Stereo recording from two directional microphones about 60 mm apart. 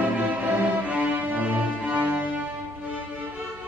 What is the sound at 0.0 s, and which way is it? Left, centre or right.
Music, right.